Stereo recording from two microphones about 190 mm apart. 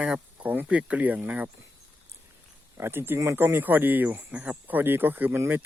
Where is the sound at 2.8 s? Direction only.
10° right (ahead or behind).